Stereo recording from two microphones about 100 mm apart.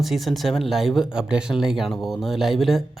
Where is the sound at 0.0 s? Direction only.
Centre (ahead or behind).